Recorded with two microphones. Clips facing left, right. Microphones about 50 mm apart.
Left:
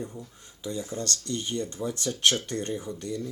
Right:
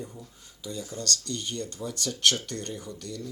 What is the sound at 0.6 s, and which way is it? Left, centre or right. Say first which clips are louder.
Speech: left 3 dB; left.